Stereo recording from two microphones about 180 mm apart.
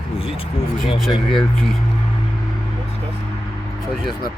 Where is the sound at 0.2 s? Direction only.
30° left (ahead or behind).